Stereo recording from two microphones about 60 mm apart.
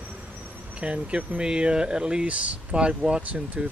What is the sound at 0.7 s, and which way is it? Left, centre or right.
Speech, centre.